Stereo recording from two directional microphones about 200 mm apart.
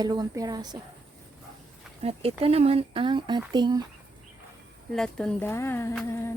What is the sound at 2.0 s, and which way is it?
Speech, 30° right (ahead or behind).